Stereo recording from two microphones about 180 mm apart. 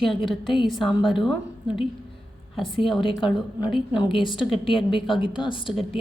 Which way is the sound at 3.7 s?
25° left (ahead or behind).